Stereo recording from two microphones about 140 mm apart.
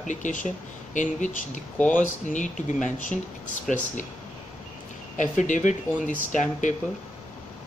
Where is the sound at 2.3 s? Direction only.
65° left (ahead or behind).